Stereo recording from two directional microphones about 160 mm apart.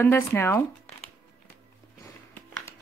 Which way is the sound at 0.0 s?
15° left (ahead or behind).